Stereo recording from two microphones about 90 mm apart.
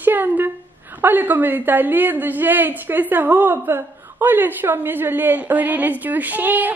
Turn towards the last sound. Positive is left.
turn(degrees=-20)  # may be behind; listen again after turning